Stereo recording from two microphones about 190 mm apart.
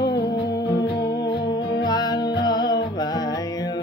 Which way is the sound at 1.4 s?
25° left (ahead or behind).